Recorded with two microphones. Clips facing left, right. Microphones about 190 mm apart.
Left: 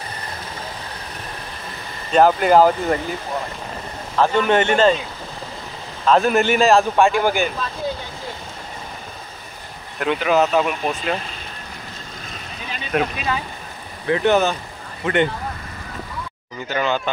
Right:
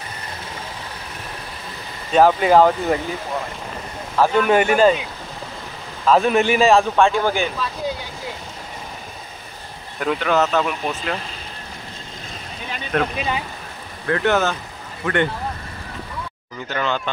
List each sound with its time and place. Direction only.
2.1 s a man's voice: centre (ahead or behind)
4.2 s a man's voice: 5° right (ahead or behind)
6.0 s a man's voice: centre (ahead or behind)
9.9 s speech: 5° left (ahead or behind)
12.9 s speech: 10° left (ahead or behind)
16.6 s speech: 10° left (ahead or behind)